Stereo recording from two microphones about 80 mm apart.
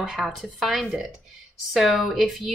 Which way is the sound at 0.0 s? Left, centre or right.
Centre.